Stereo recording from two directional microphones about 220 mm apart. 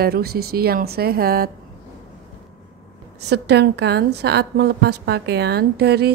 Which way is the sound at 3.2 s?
50° right (ahead or behind).